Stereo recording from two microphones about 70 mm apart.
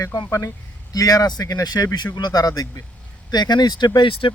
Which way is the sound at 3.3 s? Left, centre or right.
Left.